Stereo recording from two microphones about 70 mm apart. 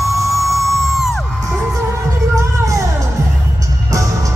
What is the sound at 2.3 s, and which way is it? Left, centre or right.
Music, right.